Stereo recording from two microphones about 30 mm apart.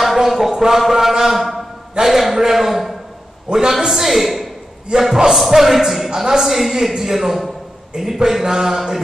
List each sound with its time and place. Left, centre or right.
0.0 s a man's voice: centre
3.5 s a man's voice: centre
4.9 s a man's voice: right
5.3 s a man's voice: centre
6.0 s a woman's voice: right
6.4 s a man's voice: centre
7.9 s a man's voice: centre